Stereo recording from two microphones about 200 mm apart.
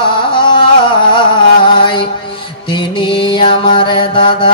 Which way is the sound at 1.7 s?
25° left (ahead or behind).